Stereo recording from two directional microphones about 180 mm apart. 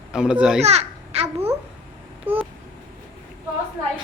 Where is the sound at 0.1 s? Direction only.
5° right (ahead or behind).